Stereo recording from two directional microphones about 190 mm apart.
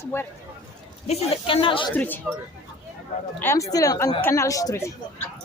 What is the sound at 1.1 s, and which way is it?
Speech, 30° left (ahead or behind).